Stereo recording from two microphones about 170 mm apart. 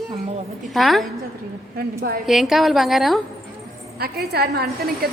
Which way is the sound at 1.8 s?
60° right (ahead or behind).